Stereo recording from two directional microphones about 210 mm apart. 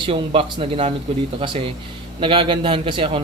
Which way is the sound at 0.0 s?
25° right (ahead or behind).